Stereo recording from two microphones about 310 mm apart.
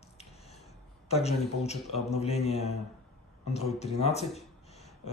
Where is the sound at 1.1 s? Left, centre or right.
Centre.